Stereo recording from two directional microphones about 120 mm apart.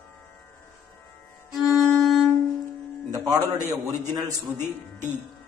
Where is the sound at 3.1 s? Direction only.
30° right (ahead or behind).